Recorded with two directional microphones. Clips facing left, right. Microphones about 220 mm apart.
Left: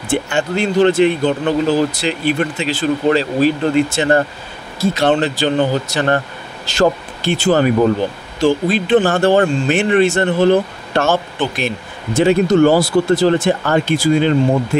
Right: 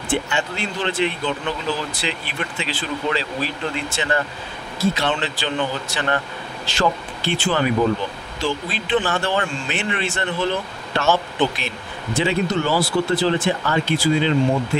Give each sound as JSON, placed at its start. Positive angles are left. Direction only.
{"t": 0.1, "sound": "speech", "side_deg": 45}